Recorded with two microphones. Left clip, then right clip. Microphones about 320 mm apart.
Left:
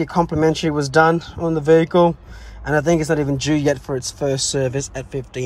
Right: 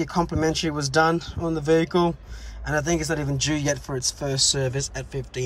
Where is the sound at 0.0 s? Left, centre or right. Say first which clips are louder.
Left 6 dB; centre.